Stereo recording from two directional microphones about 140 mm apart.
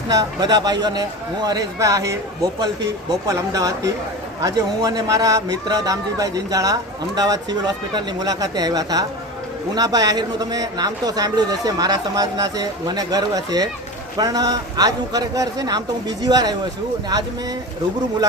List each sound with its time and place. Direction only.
0.1 s speech: 30° right (ahead or behind)